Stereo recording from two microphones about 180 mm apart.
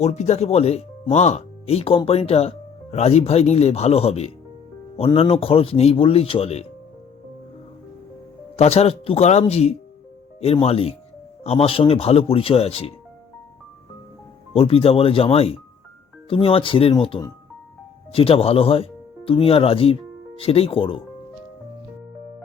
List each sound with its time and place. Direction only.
0.0 s speech: 40° left (ahead or behind)
8.5 s speech: 35° left (ahead or behind)
14.5 s speech: 30° left (ahead or behind)